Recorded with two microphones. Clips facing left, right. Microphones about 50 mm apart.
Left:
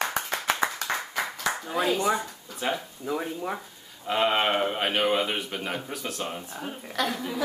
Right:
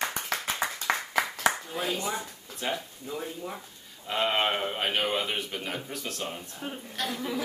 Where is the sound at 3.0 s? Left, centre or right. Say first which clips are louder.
Left 6 dB; left.